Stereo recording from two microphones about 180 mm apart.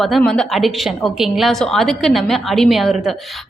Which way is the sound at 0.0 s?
Centre (ahead or behind).